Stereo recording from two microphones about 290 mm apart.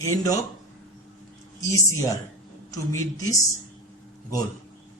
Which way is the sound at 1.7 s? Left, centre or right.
Centre.